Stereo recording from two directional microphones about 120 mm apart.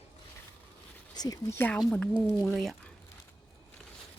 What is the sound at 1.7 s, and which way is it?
Speech, 10° left (ahead or behind).